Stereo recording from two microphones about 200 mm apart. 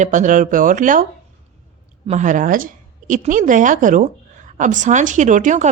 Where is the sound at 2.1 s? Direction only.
40° right (ahead or behind).